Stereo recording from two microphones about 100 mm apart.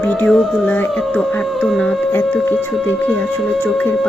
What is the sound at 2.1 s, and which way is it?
Speech, 20° left (ahead or behind).